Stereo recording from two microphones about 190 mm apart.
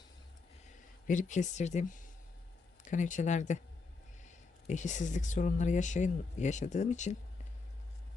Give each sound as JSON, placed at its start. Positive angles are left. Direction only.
{"t": 1.0, "sound": "speech", "side_deg": 40}
{"t": 4.7, "sound": "speech", "side_deg": 40}